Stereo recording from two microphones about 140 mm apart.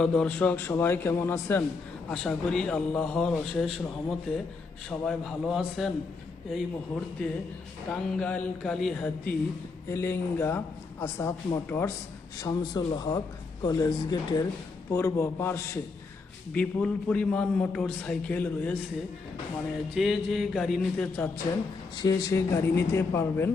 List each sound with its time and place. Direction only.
0.0 s a man's voice: 5° left (ahead or behind)
2.0 s a man's voice: 5° left (ahead or behind)
7.2 s a man's voice: 10° left (ahead or behind)
9.9 s a man's voice: 20° left (ahead or behind)
20.0 s a man's voice: centre (ahead or behind)
21.9 s speech: 25° left (ahead or behind)